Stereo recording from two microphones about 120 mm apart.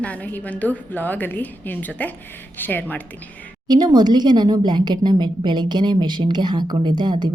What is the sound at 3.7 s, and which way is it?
A woman's voice, 35° right (ahead or behind).